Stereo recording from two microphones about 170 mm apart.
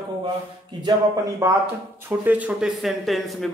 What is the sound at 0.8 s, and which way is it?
A man's voice, 20° right (ahead or behind).